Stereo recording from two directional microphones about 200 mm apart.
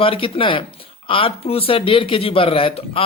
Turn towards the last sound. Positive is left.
turn(degrees=30)  # may be behind; listen again after turning